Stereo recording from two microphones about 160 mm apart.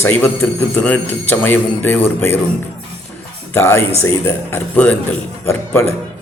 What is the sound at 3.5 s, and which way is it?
Speech, 15° left (ahead or behind).